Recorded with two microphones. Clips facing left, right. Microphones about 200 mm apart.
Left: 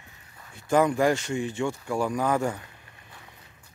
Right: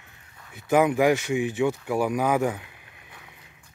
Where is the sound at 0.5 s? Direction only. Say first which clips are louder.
Right 2 dB; 15° right (ahead or behind).